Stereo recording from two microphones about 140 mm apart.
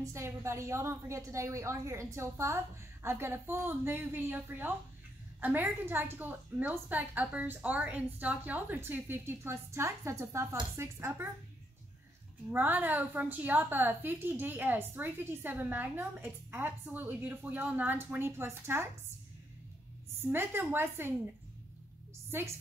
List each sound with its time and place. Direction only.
0.0 s a woman's voice: 20° right (ahead or behind)
12.4 s a woman's voice: 15° right (ahead or behind)
20.2 s a woman's voice: 15° right (ahead or behind)